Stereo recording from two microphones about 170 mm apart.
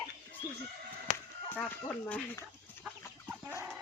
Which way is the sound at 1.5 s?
10° left (ahead or behind).